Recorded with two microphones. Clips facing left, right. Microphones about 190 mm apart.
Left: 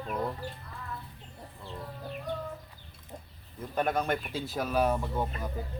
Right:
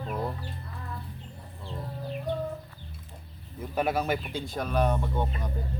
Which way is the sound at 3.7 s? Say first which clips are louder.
Right 2 dB; 5° right (ahead or behind).